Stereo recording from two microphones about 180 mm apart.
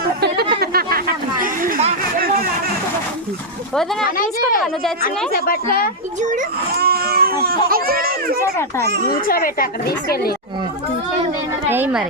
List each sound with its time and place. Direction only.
0.6 s chatter: 55° right (ahead or behind)
4.0 s speech: 50° left (ahead or behind)
6.2 s speech: 50° right (ahead or behind)
9.0 s speech: 55° left (ahead or behind)
11.7 s a woman's voice: 10° right (ahead or behind)